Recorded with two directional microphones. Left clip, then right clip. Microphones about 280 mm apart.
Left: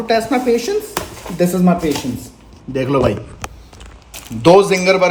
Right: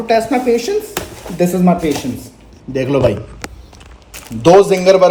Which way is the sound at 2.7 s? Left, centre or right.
Centre.